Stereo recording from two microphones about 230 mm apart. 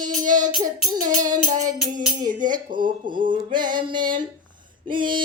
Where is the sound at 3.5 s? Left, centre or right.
Centre.